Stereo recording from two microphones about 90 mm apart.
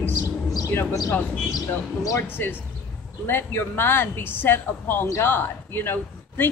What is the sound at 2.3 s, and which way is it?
Speech, 25° left (ahead or behind).